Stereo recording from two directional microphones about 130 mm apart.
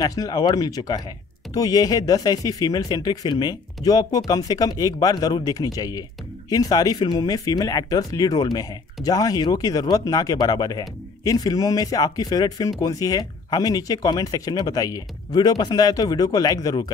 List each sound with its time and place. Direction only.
0.0 s speech: 30° left (ahead or behind)